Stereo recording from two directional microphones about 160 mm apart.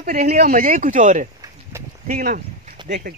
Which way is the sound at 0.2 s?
50° right (ahead or behind).